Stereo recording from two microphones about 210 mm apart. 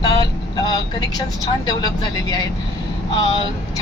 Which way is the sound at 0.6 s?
20° left (ahead or behind).